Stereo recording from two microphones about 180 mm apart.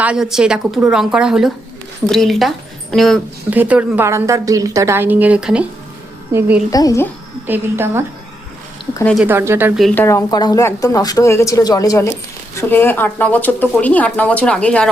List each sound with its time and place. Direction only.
0.0 s a woman's voice: 5° right (ahead or behind)
3.5 s a woman's voice: 10° right (ahead or behind)
6.7 s speech: 20° left (ahead or behind)
7.4 s a woman's voice: 10° right (ahead or behind)
9.2 s a woman's voice: 15° right (ahead or behind)
9.8 s speech: 10° left (ahead or behind)